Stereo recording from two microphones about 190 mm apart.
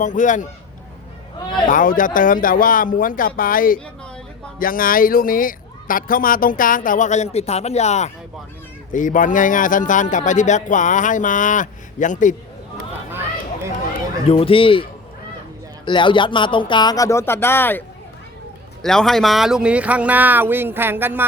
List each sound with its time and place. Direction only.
0.0 s a man's voice: 40° left (ahead or behind)
1.6 s a man's voice: 45° left (ahead or behind)
14.3 s speech: 30° left (ahead or behind)
15.9 s speech: 25° left (ahead or behind); by 21.2 s 10° right (ahead or behind)